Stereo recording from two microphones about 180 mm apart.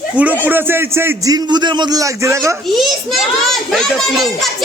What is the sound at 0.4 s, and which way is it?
A man's voice, 10° right (ahead or behind).